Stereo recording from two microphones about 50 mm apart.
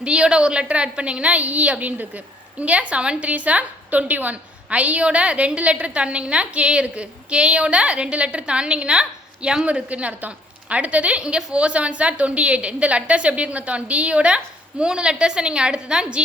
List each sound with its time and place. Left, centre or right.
0.0 s a woman's voice: right